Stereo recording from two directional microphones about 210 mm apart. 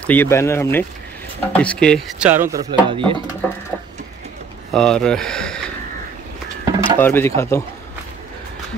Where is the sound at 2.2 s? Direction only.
10° right (ahead or behind).